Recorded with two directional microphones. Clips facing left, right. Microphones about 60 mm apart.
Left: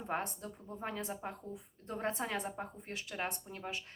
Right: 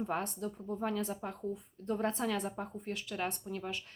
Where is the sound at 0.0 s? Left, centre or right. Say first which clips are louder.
Right 3 dB; left.